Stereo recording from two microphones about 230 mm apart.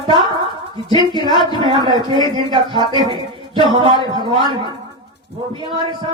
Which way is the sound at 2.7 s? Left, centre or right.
Centre.